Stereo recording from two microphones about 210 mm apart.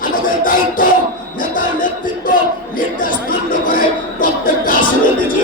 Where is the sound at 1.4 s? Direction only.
40° left (ahead or behind).